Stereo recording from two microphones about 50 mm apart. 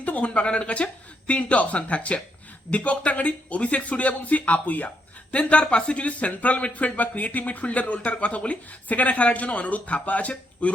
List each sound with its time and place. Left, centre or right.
0.0 s speech: left